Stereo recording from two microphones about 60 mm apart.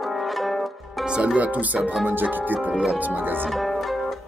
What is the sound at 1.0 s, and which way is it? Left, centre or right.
Speech, centre.